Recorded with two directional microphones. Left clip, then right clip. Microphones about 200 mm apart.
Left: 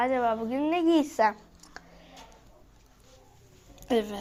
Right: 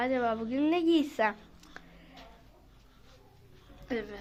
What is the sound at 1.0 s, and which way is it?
Speech, centre (ahead or behind).